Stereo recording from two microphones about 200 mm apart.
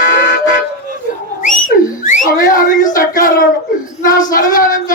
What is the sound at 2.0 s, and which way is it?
Whistling, 45° left (ahead or behind).